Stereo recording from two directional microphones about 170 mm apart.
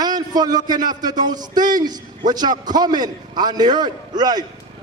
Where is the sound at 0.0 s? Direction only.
25° right (ahead or behind).